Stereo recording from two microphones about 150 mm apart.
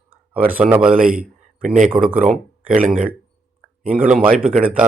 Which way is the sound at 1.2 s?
10° right (ahead or behind).